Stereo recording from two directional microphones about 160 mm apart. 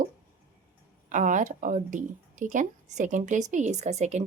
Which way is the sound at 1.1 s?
50° right (ahead or behind).